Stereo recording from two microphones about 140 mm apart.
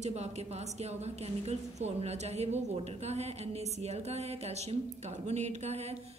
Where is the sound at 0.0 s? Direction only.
55° right (ahead or behind).